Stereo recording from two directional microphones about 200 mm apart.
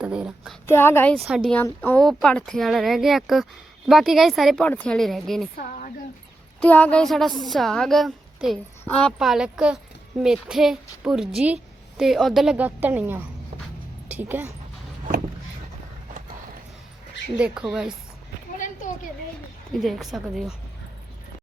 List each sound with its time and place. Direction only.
0.0 s a woman's voice: 5° right (ahead or behind)
0.7 s a woman's voice: 10° left (ahead or behind)
5.5 s speech: 40° left (ahead or behind)
6.6 s a woman's voice: 10° left (ahead or behind); by 14.5 s 10° right (ahead or behind)
17.3 s a woman's voice: 5° right (ahead or behind)
19.8 s a woman's voice: centre (ahead or behind)